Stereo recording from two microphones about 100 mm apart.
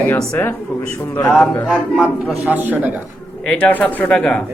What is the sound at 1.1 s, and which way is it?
Speech, 20° left (ahead or behind).